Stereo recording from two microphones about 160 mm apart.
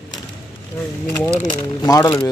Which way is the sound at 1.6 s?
20° left (ahead or behind).